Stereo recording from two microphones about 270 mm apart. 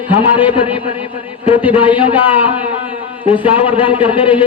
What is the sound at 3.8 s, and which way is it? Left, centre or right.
Speech, centre.